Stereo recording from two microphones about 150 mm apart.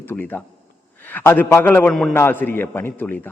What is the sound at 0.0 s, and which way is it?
A man's voice, 15° left (ahead or behind).